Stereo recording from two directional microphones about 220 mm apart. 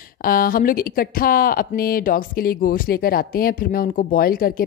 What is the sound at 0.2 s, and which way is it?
Speech, 40° left (ahead or behind).